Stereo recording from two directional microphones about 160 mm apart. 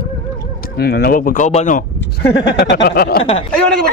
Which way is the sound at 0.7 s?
80° left.